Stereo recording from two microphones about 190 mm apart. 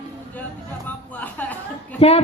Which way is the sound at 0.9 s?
10° left (ahead or behind).